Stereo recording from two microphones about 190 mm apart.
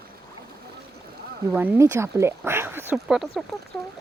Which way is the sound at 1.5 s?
10° right (ahead or behind).